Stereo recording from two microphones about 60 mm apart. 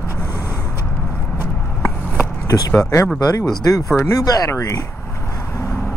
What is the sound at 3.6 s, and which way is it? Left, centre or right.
Speech, left.